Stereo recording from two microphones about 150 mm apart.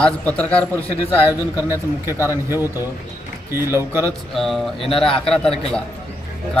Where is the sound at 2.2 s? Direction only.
15° right (ahead or behind).